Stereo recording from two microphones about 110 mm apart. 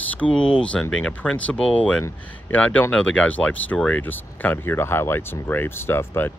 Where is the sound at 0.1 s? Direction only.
10° left (ahead or behind).